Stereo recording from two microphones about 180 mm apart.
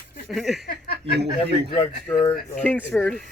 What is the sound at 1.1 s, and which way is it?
Speech, 70° right (ahead or behind).